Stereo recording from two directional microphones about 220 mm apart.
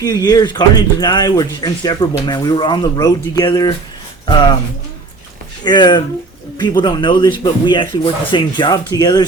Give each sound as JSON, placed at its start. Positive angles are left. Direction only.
{"t": 0.0, "sound": "speech", "side_deg": 15}
{"t": 5.6, "sound": "speech", "side_deg": 20}